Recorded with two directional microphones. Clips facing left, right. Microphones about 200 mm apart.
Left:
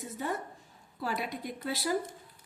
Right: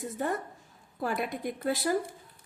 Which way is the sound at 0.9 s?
50° right (ahead or behind).